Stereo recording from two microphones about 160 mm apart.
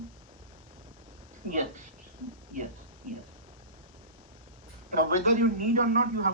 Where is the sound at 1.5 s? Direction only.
55° right (ahead or behind).